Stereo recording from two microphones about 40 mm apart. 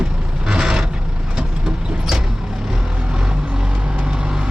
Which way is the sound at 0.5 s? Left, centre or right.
Centre.